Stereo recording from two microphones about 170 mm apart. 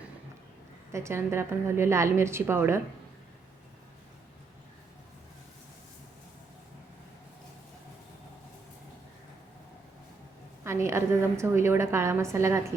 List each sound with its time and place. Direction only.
0.9 s a woman's voice: 15° right (ahead or behind)
10.6 s a woman's voice: 15° right (ahead or behind)